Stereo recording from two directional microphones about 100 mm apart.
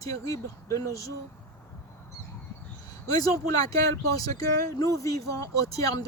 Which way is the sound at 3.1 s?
35° left (ahead or behind).